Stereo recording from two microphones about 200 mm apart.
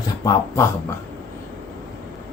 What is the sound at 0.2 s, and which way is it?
Speech, 15° left (ahead or behind).